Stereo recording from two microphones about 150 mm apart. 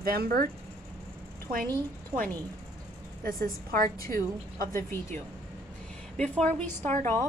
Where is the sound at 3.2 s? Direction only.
75° right (ahead or behind).